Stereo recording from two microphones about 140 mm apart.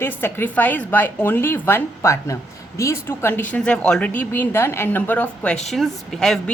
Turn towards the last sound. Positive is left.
turn(degrees=5)  # may be behind; listen again after turning